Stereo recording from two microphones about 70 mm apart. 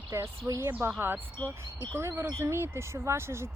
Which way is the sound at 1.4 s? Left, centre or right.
Right.